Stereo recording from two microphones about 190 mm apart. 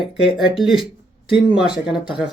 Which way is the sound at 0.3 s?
Centre (ahead or behind).